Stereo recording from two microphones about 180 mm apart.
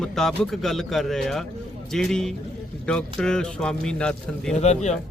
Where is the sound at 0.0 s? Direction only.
Centre (ahead or behind).